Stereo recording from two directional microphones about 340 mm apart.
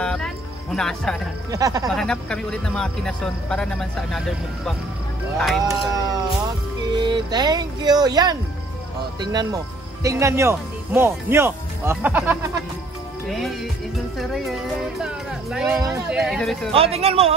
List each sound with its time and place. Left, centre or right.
0.0 s music: centre
1.5 s speech: centre
1.9 s music: centre
5.4 s music: centre
6.9 s speech: centre
13.3 s music: centre
16.7 s speech: centre